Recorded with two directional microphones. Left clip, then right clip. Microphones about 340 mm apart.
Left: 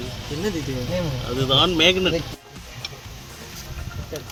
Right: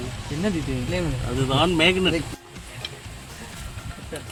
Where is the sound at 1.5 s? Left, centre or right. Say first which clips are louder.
Left 3 dB; centre.